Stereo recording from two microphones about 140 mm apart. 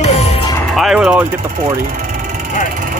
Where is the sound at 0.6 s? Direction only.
Centre (ahead or behind).